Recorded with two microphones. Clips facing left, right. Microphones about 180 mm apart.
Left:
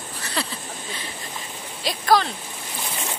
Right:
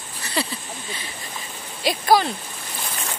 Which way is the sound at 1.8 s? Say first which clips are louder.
Right 2 dB; 5° right (ahead or behind).